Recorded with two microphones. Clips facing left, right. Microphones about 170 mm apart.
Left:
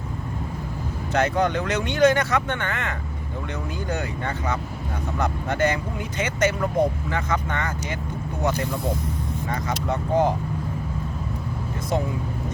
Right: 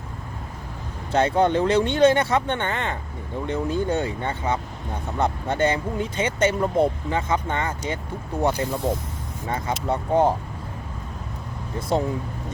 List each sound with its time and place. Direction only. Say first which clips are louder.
1.1 s speech: right 3 dB; 30° right (ahead or behind)
9.5 s speech: right 3 dB; 30° right (ahead or behind)